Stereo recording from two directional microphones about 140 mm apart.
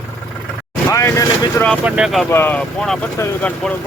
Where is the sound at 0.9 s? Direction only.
20° left (ahead or behind).